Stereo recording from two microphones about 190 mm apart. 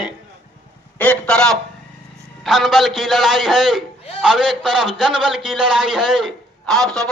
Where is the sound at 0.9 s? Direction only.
10° left (ahead or behind).